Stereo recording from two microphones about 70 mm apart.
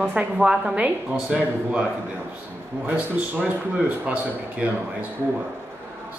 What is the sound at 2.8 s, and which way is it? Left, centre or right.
Speech, right.